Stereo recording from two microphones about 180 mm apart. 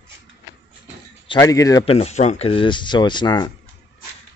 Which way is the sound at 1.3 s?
20° left (ahead or behind).